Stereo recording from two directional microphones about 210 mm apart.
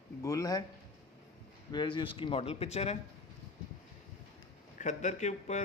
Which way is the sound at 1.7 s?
20° left (ahead or behind).